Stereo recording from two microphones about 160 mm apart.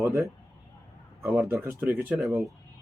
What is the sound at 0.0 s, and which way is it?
A man's voice, 20° right (ahead or behind).